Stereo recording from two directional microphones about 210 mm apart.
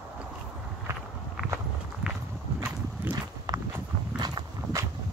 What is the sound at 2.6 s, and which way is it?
Horse, 15° right (ahead or behind).